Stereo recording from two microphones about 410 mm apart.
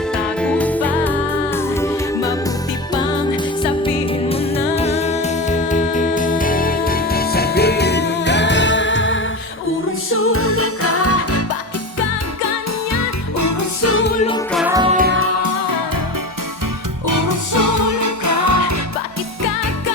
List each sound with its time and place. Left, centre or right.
0.1 s music: centre
3.8 s music: centre; by 11.4 s left
12.5 s music: left
14.5 s music: centre; by 15.4 s right
15.4 s music: right
17.1 s music: right